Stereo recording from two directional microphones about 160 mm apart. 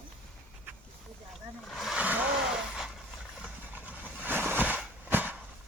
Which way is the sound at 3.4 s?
5° right (ahead or behind).